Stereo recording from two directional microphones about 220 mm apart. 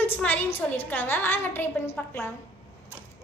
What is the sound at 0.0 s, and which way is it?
A woman's voice, 10° left (ahead or behind).